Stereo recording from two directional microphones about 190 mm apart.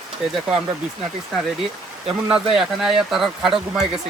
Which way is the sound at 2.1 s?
5° right (ahead or behind).